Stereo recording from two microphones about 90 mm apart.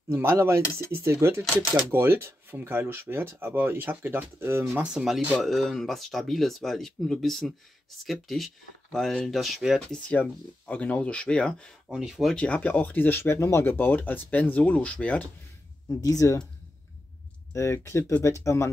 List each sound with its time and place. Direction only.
0.1 s speech: 30° right (ahead or behind)
4.8 s speech: 5° right (ahead or behind)
9.8 s speech: 15° left (ahead or behind)
11.9 s speech: 5° right (ahead or behind)
12.4 s speech: 15° left (ahead or behind)
15.9 s speech: 40° left (ahead or behind)
17.5 s speech: 30° left (ahead or behind)